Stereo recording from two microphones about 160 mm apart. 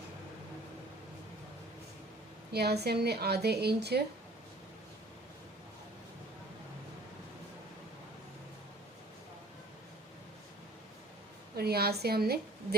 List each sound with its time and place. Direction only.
2.5 s a woman's voice: 90° right
11.5 s a woman's voice: 80° right